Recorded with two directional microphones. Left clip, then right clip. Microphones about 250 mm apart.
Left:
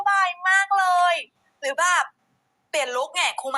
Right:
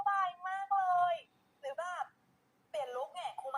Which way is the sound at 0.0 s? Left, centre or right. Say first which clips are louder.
Left 13 dB; left.